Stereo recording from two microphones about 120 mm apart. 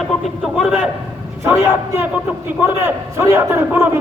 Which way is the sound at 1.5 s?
20° right (ahead or behind).